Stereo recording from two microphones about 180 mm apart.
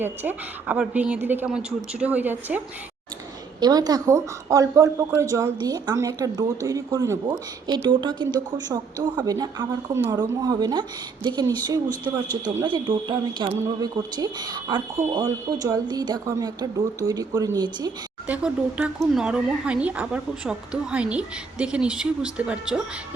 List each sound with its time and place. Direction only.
0.0 s a woman's voice: 10° right (ahead or behind)
3.6 s a woman's voice: 20° right (ahead or behind)
18.3 s speech: 5° right (ahead or behind)